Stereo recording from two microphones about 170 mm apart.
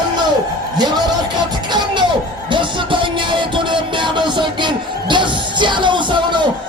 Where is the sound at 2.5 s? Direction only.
30° right (ahead or behind).